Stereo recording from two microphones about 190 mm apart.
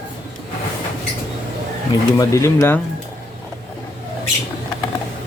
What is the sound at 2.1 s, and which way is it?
Speech, 15° left (ahead or behind).